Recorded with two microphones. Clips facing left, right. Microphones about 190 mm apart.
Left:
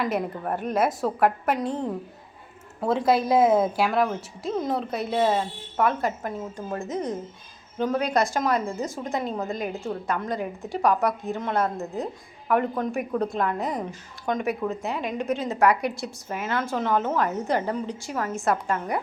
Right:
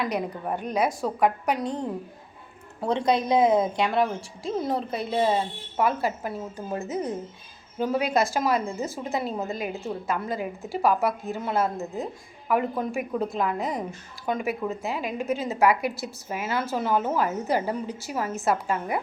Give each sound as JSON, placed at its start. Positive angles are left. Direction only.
{"t": 0.0, "sound": "a woman's voice", "side_deg": 0}